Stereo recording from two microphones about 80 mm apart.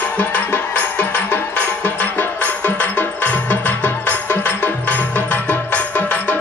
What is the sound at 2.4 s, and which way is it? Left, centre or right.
Music, left.